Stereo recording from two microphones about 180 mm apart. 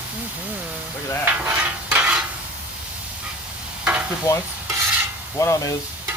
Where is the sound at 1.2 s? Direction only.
10° right (ahead or behind).